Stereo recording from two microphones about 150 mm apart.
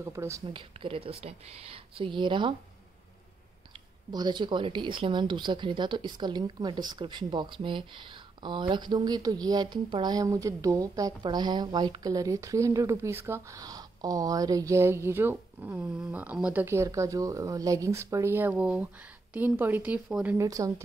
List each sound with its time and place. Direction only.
0.0 s speech: 20° right (ahead or behind)
0.5 s speech: 35° right (ahead or behind)
4.1 s a woman's voice: 30° right (ahead or behind); by 20.3 s 10° right (ahead or behind)
20.3 s speech: 20° right (ahead or behind)